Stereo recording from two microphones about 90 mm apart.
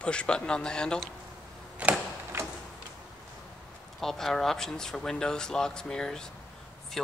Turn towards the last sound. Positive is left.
turn(degrees=5)  # may be behind; listen again after turning